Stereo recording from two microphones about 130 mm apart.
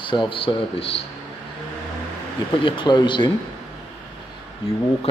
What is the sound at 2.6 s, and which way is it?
Speech, 40° left (ahead or behind).